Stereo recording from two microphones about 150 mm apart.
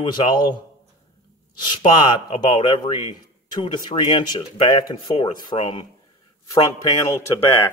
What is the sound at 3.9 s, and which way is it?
Speech, 30° left (ahead or behind).